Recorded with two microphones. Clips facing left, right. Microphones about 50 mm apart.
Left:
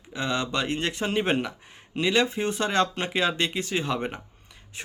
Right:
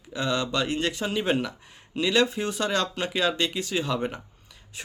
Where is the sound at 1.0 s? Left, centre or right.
Left.